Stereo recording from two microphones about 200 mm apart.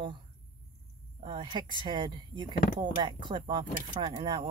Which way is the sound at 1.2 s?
25° right (ahead or behind).